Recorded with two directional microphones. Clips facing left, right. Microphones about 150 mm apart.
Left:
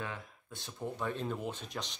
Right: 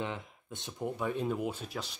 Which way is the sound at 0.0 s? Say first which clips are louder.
Right 4 dB; 20° right (ahead or behind).